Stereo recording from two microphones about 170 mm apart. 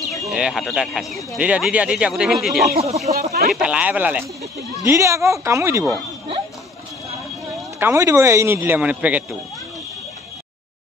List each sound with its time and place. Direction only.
0.0 s speech: centre (ahead or behind)
2.7 s speech: 40° right (ahead or behind)
3.5 s a man's voice: 5° right (ahead or behind)
7.8 s a man's voice: 15° right (ahead or behind)